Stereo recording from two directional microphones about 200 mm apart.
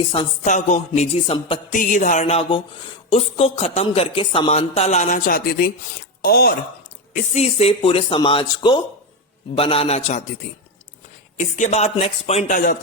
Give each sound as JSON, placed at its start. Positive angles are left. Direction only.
{"t": 0.1, "sound": "speech", "side_deg": 35}
{"t": 1.7, "sound": "speech", "side_deg": 40}
{"t": 7.1, "sound": "speech", "side_deg": 30}
{"t": 11.3, "sound": "speech", "side_deg": 40}